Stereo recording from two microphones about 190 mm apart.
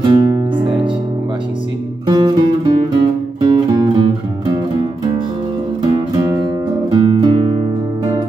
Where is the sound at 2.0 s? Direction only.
20° right (ahead or behind).